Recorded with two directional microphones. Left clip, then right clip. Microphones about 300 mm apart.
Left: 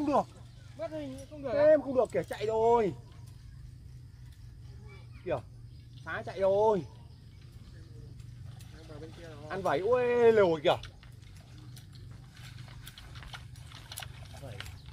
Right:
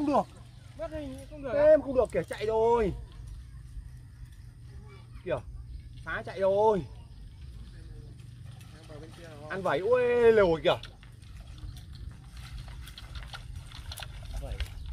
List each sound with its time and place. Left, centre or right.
0.0 s a sound: centre
0.7 s speech: centre
1.6 s speech: centre
5.2 s speech: centre
9.5 s speech: centre
12.9 s horse: centre